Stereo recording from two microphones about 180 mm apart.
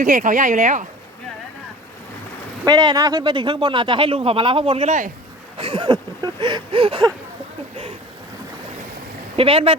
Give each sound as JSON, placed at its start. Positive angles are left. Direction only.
{"t": 0.0, "sound": "speech", "side_deg": -45}
{"t": 2.6, "sound": "speech", "side_deg": -20}
{"t": 5.5, "sound": "a sound", "side_deg": -30}
{"t": 9.3, "sound": "speech", "side_deg": -30}